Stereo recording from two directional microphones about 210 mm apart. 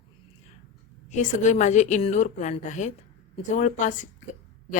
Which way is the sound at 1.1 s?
35° left (ahead or behind).